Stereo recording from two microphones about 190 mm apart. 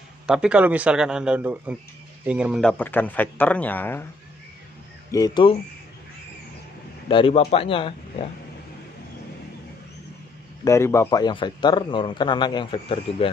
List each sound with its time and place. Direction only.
0.3 s a man's voice: 5° right (ahead or behind)
2.7 s a man's voice: 10° left (ahead or behind)
5.1 s a man's voice: 20° left (ahead or behind)
7.1 s a man's voice: 30° left (ahead or behind)
10.6 s a man's voice: 15° left (ahead or behind)